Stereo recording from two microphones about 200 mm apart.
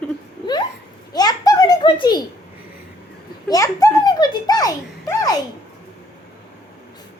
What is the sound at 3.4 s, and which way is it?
A child's voice, 15° left (ahead or behind).